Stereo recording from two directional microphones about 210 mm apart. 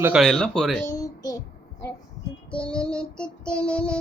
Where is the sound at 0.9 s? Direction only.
15° left (ahead or behind).